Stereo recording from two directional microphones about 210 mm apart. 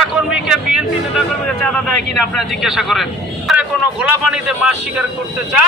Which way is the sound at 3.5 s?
5° right (ahead or behind).